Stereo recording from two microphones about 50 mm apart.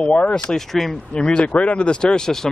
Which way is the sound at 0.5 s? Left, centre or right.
Centre.